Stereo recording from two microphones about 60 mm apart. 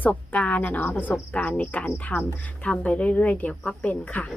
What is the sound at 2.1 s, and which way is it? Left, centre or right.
Speech, left.